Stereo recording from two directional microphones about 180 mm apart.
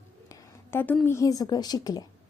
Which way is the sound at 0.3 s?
15° left (ahead or behind).